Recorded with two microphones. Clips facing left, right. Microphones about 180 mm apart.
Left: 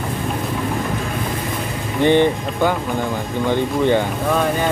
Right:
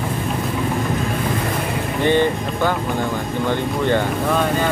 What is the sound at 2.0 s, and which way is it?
Speech, 15° left (ahead or behind).